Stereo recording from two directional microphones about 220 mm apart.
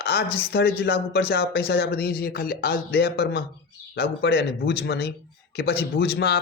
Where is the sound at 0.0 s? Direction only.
45° left (ahead or behind).